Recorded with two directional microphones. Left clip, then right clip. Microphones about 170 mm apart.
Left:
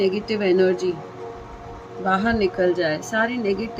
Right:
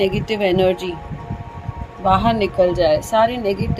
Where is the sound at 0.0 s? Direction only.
90° right.